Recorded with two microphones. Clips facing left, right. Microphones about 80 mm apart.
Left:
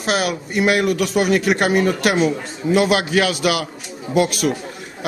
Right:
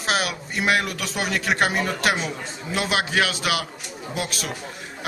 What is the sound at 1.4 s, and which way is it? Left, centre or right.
Speech, right.